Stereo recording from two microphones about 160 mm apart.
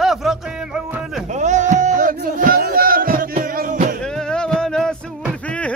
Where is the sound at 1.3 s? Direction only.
50° right (ahead or behind).